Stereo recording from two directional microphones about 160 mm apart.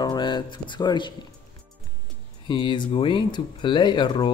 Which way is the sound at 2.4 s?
30° left (ahead or behind).